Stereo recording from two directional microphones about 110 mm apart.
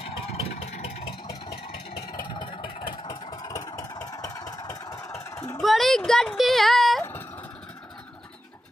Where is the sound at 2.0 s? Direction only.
45° left (ahead or behind).